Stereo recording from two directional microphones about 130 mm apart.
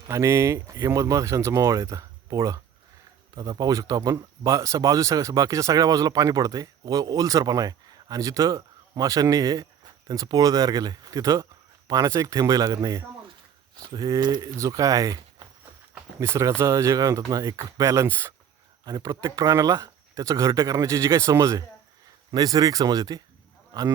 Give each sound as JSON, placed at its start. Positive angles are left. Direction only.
{"t": 0.1, "sound": "speech", "side_deg": -20}